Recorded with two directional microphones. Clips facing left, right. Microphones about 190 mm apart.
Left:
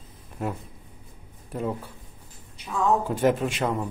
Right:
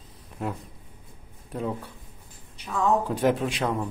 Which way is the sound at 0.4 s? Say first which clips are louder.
Left 1 dB; 5° left (ahead or behind).